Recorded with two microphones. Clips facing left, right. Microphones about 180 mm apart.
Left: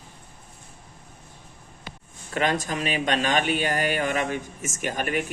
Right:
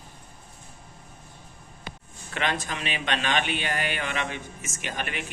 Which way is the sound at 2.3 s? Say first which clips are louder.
Left 5 dB; 40° left (ahead or behind).